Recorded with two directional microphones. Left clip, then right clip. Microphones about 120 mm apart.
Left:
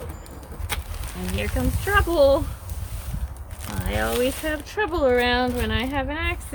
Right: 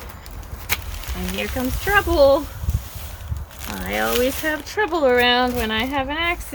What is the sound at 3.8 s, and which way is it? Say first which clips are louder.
Speech: right 3 dB; 35° right (ahead or behind).